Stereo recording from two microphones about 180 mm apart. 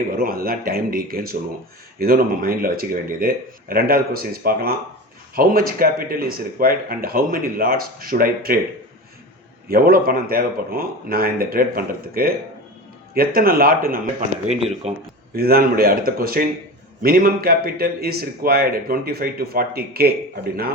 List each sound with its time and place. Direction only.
0.2 s speech: 55° right (ahead or behind)
9.6 s speech: 55° right (ahead or behind)
14.4 s speech: 40° right (ahead or behind)
15.4 s speech: 55° right (ahead or behind)